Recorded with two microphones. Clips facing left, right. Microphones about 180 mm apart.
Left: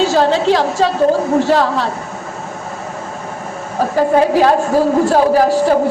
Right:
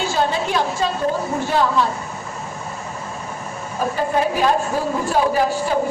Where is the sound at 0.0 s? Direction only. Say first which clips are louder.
Left 8 dB; 85° left.